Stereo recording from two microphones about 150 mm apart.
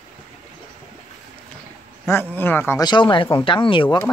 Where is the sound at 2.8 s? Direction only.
30° left (ahead or behind).